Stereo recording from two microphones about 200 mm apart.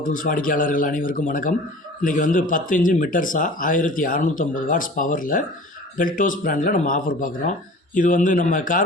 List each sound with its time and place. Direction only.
0.0 s a man's voice: 45° left (ahead or behind)